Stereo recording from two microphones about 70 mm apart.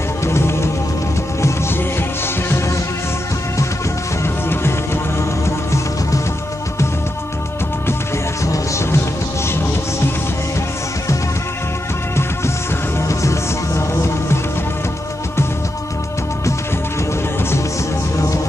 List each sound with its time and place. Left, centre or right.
0.2 s music: left
4.2 s music: left
8.5 s music: left
13.1 s music: left
18.1 s music: left